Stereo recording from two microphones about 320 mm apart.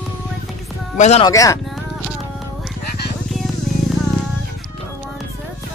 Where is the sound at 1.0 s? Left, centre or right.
Centre.